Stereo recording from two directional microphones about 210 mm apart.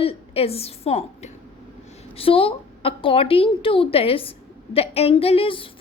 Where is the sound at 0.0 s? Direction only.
25° left (ahead or behind).